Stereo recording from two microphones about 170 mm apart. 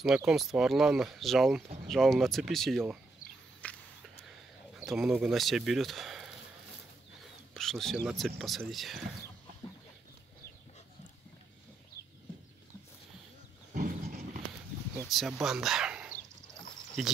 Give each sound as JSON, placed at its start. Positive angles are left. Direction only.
{"t": 0.0, "sound": "speech", "side_deg": -5}
{"t": 3.6, "sound": "walk", "side_deg": 5}
{"t": 4.7, "sound": "speech", "side_deg": 0}
{"t": 7.5, "sound": "speech", "side_deg": 0}
{"t": 13.7, "sound": "a sound", "side_deg": -55}
{"t": 15.0, "sound": "speech", "side_deg": 0}